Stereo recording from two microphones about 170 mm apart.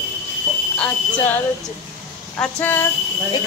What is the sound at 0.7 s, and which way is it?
Speech, 10° left (ahead or behind).